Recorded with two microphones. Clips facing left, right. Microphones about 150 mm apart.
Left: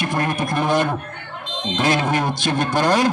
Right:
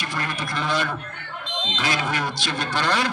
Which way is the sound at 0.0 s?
50° left (ahead or behind).